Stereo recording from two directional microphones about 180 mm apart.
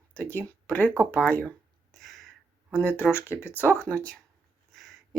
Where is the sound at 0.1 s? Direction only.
10° left (ahead or behind).